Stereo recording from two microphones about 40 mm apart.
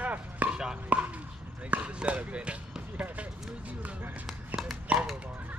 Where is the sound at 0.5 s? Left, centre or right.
Centre.